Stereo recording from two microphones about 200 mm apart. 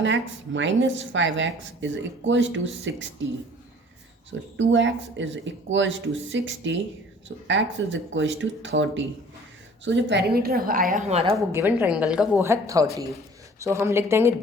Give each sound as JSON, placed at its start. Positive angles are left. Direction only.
{"t": 0.0, "sound": "speech", "side_deg": -65}
{"t": 4.3, "sound": "a woman's voice", "side_deg": -65}
{"t": 11.5, "sound": "a woman's voice", "side_deg": -10}